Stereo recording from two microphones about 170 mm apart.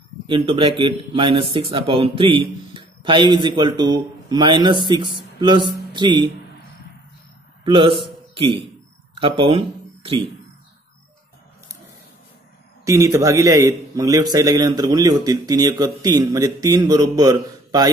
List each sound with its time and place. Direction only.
0.3 s a man's voice: 30° right (ahead or behind)
7.6 s a man's voice: 30° right (ahead or behind)
9.2 s speech: 30° right (ahead or behind)
12.8 s a man's voice: 15° right (ahead or behind)